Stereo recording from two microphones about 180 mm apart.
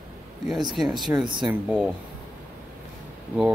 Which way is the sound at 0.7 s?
Centre (ahead or behind).